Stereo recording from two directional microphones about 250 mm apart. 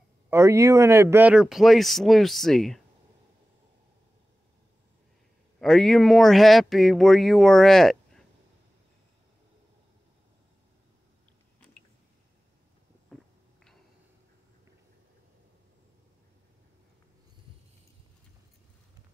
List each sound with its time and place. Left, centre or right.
0.3 s speech: centre
5.6 s speech: centre
13.1 s a sound: centre